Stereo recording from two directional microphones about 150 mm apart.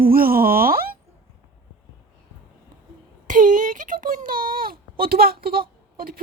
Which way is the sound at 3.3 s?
60° right (ahead or behind).